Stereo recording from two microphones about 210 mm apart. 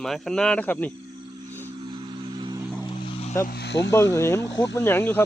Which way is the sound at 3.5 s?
50° left (ahead or behind).